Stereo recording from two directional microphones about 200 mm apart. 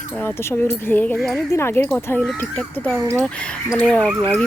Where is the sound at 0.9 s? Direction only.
5° left (ahead or behind).